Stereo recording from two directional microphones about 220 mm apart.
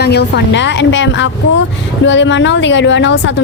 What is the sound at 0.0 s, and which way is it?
A woman's voice, 50° left (ahead or behind).